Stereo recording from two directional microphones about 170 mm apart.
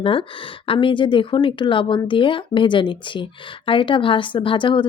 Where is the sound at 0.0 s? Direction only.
30° left (ahead or behind).